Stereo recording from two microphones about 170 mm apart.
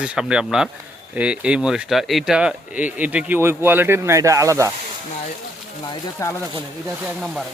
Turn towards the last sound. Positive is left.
turn(degrees=-5)  # may be behind; listen again after turning